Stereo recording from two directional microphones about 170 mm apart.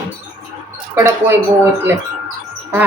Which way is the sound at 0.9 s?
20° right (ahead or behind).